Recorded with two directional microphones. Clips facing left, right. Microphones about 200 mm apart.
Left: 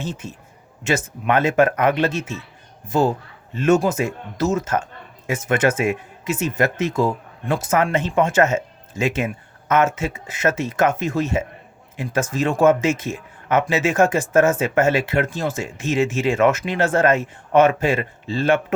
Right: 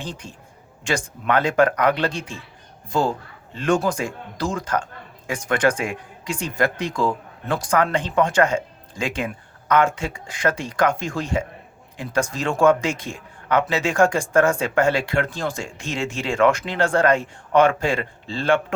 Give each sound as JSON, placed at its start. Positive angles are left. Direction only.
{"t": 1.3, "sound": "a man's voice", "side_deg": 20}